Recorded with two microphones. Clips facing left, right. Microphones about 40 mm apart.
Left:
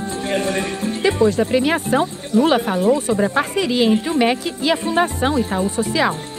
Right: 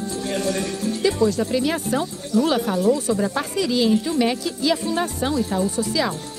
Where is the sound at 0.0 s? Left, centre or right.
Left.